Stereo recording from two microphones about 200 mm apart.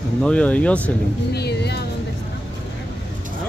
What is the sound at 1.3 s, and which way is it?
Speech, 55° left (ahead or behind).